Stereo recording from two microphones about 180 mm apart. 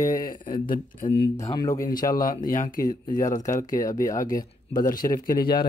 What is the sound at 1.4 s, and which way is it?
Speech, 20° left (ahead or behind).